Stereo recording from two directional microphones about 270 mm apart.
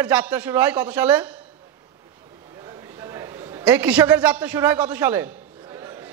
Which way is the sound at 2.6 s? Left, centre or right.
Centre.